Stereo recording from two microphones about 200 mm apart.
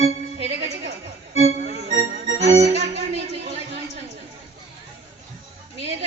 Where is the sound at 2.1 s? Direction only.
30° right (ahead or behind).